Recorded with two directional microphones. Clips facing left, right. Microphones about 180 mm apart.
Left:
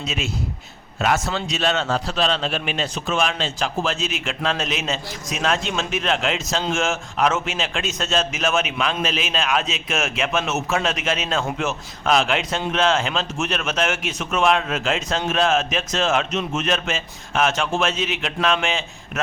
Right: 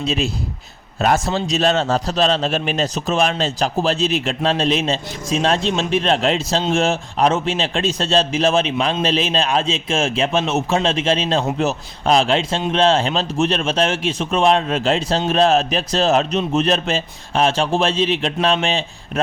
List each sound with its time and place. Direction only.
0.0 s a man's voice: 35° right (ahead or behind)